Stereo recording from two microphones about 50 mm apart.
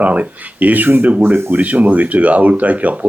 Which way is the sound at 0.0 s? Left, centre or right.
Right.